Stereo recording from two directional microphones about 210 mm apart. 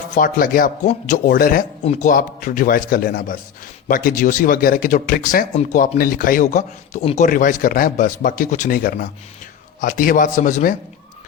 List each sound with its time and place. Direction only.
0.1 s speech: 40° left (ahead or behind)
1.8 s speech: 35° left (ahead or behind)